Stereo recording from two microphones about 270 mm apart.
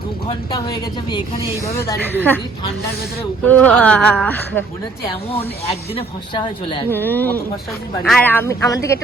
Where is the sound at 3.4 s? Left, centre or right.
Centre.